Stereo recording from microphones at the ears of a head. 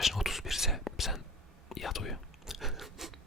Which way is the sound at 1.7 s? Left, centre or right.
Left.